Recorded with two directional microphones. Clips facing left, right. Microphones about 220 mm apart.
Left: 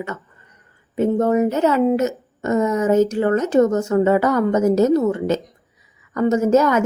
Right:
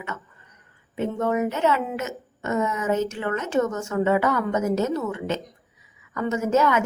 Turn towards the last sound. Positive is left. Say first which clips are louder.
# left 6 dB
turn(degrees=40)  # may be behind; listen again after turning